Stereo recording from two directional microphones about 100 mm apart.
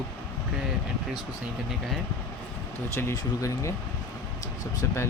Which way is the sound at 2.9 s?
30° left (ahead or behind).